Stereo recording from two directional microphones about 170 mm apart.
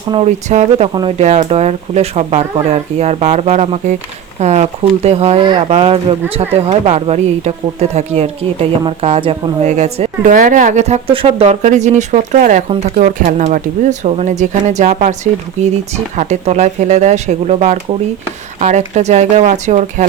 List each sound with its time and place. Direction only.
0.3 s speech: 45° right (ahead or behind)
18.9 s speech: 40° right (ahead or behind)